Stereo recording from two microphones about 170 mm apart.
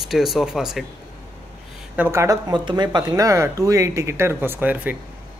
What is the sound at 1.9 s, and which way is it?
Speech, 15° right (ahead or behind).